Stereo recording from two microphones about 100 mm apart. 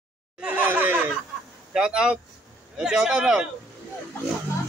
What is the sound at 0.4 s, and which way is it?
Laughter, 15° right (ahead or behind).